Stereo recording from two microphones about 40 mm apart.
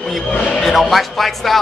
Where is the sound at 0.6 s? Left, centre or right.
Centre.